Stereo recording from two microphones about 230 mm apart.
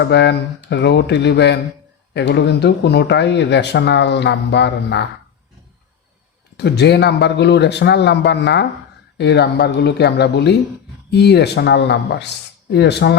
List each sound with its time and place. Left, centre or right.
0.0 s speech: left
6.6 s speech: left